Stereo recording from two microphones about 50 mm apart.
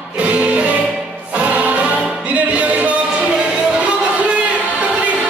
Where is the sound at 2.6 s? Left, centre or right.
Right.